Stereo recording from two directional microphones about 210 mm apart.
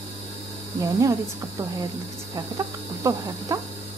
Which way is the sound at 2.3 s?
15° right (ahead or behind).